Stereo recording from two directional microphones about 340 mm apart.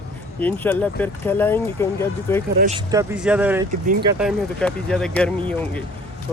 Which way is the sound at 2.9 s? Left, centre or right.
Centre.